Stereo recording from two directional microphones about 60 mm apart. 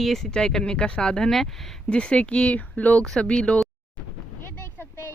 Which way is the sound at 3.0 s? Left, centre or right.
Centre.